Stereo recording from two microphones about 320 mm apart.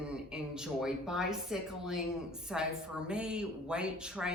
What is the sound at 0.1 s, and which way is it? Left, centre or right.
Speech, centre.